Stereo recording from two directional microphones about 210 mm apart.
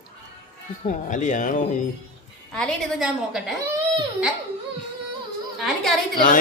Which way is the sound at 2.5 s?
5° left (ahead or behind).